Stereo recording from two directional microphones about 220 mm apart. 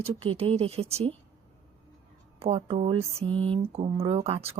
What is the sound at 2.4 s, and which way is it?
Speech, 25° right (ahead or behind).